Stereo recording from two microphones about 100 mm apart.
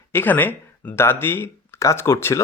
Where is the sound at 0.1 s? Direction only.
20° left (ahead or behind).